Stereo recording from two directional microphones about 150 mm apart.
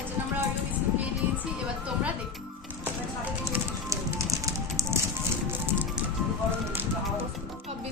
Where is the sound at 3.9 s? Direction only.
20° right (ahead or behind).